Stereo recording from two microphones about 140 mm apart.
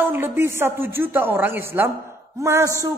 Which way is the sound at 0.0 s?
15° right (ahead or behind).